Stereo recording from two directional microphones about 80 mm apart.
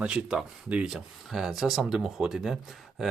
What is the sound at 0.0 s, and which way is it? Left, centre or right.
Speech, centre.